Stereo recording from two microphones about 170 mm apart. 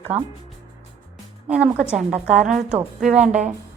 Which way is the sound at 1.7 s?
5° right (ahead or behind).